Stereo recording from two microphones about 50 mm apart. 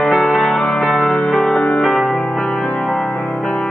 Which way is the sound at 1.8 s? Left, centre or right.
Centre.